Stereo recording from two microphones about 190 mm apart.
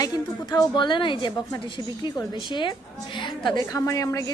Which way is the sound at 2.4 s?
25° left (ahead or behind).